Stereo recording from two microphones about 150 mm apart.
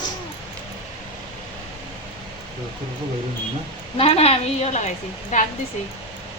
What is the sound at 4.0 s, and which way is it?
Speech, 40° left (ahead or behind).